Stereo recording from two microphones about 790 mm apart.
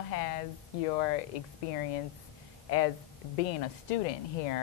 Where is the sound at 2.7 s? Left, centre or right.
Left.